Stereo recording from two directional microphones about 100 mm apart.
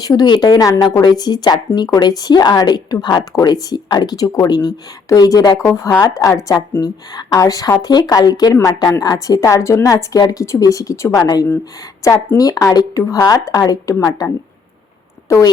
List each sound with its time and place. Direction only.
0.0 s a woman's voice: 40° left (ahead or behind)
6.7 s a woman's voice: 40° left (ahead or behind)
15.3 s a woman's voice: 30° left (ahead or behind)